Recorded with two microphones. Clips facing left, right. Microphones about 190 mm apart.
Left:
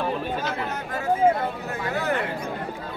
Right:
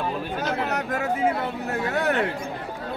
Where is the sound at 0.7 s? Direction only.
75° right (ahead or behind).